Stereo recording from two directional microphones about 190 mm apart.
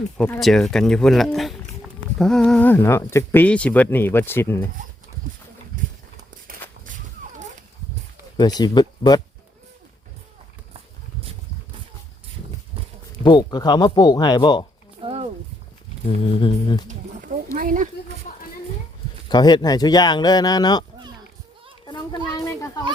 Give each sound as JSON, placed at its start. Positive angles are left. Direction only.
{"t": 0.2, "sound": "speech", "side_deg": 5}
{"t": 6.5, "sound": "walk", "side_deg": -50}
{"t": 8.4, "sound": "speech", "side_deg": 20}
{"t": 13.2, "sound": "speech", "side_deg": 20}
{"t": 15.0, "sound": "a sound", "side_deg": -30}
{"t": 16.0, "sound": "speech", "side_deg": 30}
{"t": 17.5, "sound": "speech", "side_deg": -45}
{"t": 18.3, "sound": "a sound", "side_deg": 40}
{"t": 19.3, "sound": "speech", "side_deg": 20}
{"t": 21.8, "sound": "a sound", "side_deg": 25}